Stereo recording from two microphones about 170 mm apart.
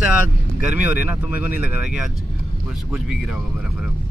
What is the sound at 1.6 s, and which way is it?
Speech, 5° right (ahead or behind).